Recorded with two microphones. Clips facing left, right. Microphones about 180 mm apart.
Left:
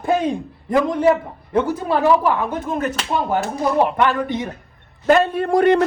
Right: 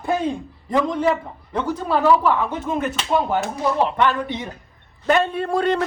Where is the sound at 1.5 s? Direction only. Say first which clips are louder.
Left 3 dB; 10° left (ahead or behind).